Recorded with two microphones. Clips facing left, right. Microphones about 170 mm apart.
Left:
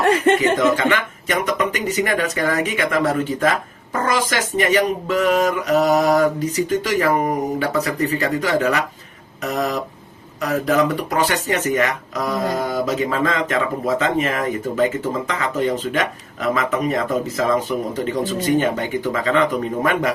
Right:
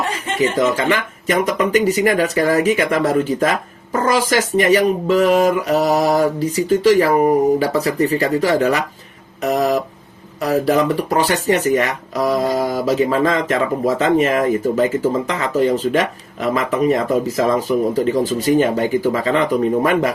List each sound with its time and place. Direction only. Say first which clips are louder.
0.0 s speech: left 4 dB; 60° left (ahead or behind)
0.9 s speech: right 2 dB; 35° right (ahead or behind)